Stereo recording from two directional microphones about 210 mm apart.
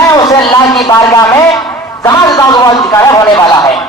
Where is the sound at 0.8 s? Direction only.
15° left (ahead or behind).